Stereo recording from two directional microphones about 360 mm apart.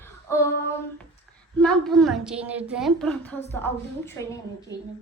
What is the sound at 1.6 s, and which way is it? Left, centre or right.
A woman's voice, centre.